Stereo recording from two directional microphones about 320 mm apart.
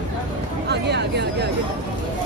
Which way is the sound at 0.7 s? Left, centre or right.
Right.